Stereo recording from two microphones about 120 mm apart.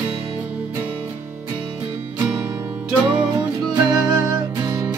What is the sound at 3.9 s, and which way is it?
Music, 5° right (ahead or behind).